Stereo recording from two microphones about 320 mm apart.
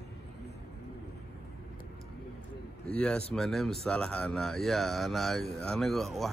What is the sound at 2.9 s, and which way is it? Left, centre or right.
Speech, centre.